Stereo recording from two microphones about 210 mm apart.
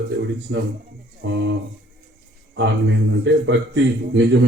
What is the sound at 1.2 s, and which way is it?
Speech, 65° right (ahead or behind).